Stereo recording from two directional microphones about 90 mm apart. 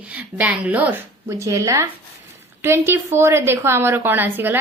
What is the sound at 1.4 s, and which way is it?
A woman's voice, 35° right (ahead or behind).